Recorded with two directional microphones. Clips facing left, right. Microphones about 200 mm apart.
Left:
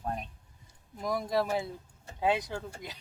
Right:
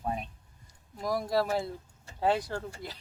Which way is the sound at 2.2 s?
15° left (ahead or behind).